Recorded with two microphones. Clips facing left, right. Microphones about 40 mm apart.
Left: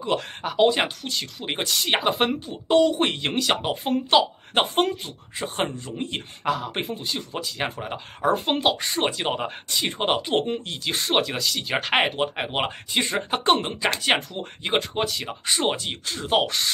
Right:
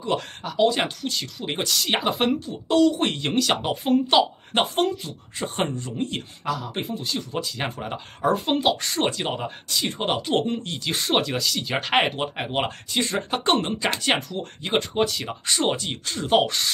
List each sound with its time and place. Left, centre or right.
0.4 s a man's voice: left
0.7 s speech: centre
2.4 s speech: left
3.1 s speech: centre
4.7 s a man's voice: left
5.4 s speech: centre
6.4 s a man's voice: left
7.0 s speech: centre
9.4 s speech: left
10.3 s speech: centre
14.8 s speech: centre